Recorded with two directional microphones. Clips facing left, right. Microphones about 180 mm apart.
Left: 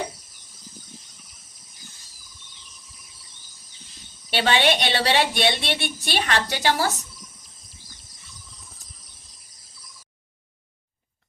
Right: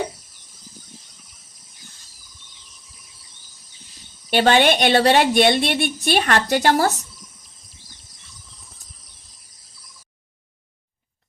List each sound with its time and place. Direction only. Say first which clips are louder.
4.3 s a woman's voice: right 5 dB; 45° right (ahead or behind)
7.2 s a sound: even; centre (ahead or behind)
8.5 s cricket: left 1 dB; centre (ahead or behind)